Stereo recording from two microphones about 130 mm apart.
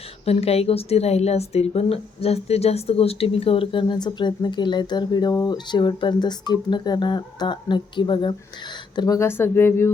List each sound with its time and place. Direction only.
0.3 s speech: 50° left (ahead or behind)
9.0 s speech: 25° left (ahead or behind)